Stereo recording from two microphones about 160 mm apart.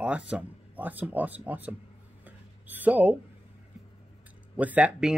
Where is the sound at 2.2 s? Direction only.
10° right (ahead or behind).